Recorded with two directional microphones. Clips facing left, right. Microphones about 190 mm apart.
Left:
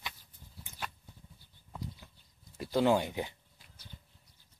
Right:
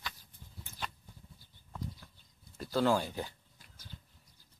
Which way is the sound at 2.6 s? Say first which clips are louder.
Left 2 dB; 15° left (ahead or behind).